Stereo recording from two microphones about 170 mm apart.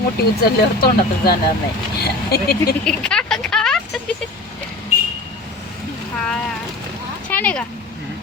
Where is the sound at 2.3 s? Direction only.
60° left (ahead or behind).